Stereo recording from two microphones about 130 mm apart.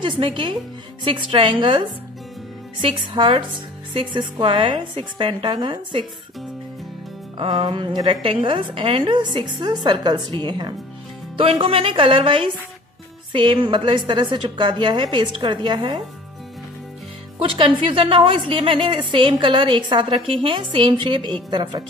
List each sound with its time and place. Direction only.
0.0 s a woman's voice: 45° right (ahead or behind)
7.3 s a woman's voice: 40° right (ahead or behind)
11.5 s a woman's voice: 45° right (ahead or behind)
17.4 s a woman's voice: 45° right (ahead or behind)